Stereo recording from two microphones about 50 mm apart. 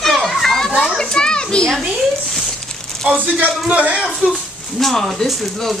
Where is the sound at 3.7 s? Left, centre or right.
Right.